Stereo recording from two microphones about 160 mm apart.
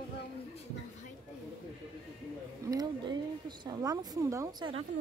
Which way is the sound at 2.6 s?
25° right (ahead or behind).